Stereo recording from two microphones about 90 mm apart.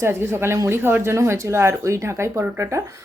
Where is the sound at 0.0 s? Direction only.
30° right (ahead or behind).